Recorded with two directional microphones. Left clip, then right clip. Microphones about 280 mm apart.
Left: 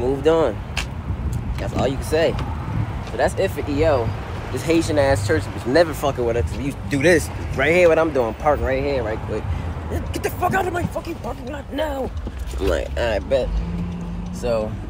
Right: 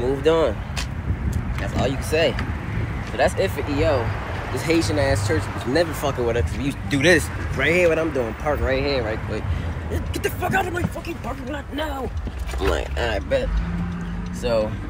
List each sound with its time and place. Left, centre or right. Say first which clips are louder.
0.0 s speech: left 1 dB; centre
1.6 s speech: left 2 dB; centre
4.9 s speech: left 4 dB; centre
5.9 s speech: left 2 dB; centre
12.5 s speech: left 2 dB; centre